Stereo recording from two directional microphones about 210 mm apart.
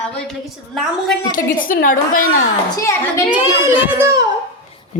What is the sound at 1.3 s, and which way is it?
Speech, 40° left (ahead or behind).